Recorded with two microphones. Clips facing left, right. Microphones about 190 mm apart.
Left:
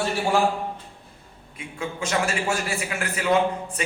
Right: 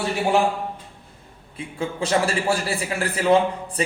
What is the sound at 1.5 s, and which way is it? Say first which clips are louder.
A man's voice: right 4 dB; 35° right (ahead or behind).